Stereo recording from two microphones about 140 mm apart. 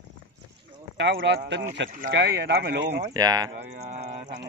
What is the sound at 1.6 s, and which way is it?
Speech, 70° right (ahead or behind).